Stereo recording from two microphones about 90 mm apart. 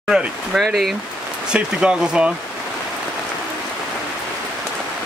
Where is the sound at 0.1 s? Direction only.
5° right (ahead or behind).